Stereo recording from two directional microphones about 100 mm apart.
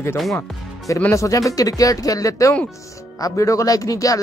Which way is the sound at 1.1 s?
35° left (ahead or behind).